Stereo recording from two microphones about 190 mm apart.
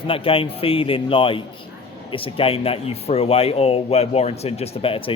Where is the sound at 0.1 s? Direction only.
30° left (ahead or behind).